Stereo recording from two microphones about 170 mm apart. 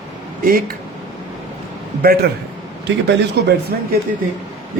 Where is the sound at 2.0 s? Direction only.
65° right (ahead or behind).